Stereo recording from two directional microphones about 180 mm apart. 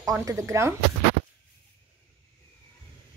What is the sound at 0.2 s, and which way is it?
Speech, 15° right (ahead or behind).